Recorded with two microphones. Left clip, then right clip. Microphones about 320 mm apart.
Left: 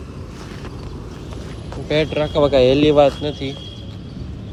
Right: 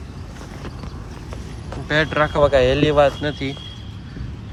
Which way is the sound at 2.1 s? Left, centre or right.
Centre.